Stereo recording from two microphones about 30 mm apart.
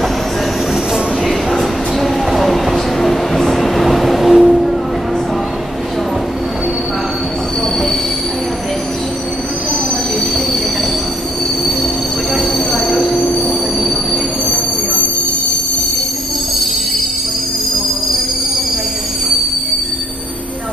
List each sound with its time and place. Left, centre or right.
1.2 s a sound: centre
3.0 s vehicle: centre
12.4 s train: centre
13.0 s train: centre
13.8 s train: centre